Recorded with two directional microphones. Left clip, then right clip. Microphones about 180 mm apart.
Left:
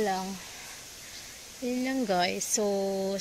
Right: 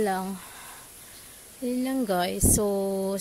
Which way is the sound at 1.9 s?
25° right (ahead or behind).